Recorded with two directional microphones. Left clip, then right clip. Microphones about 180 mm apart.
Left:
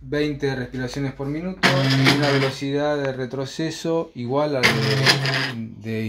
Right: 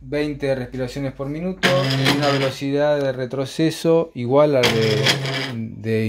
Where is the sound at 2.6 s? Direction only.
45° right (ahead or behind).